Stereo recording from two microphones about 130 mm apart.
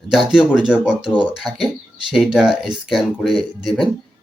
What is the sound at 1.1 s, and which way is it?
Speech, 35° right (ahead or behind).